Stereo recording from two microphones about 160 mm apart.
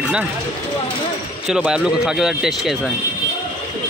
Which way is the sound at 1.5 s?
5° right (ahead or behind).